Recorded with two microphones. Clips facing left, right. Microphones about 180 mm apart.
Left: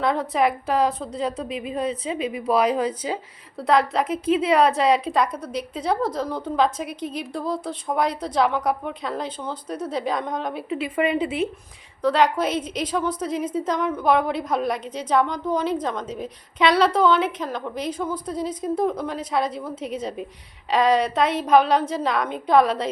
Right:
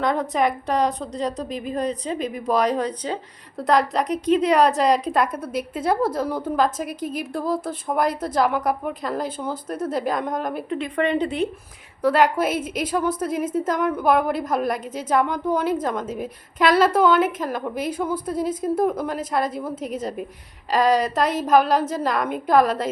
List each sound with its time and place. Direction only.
0.0 s a woman's voice: centre (ahead or behind)
1.4 s a woman's voice: 40° right (ahead or behind)
1.6 s a woman's voice: 5° left (ahead or behind)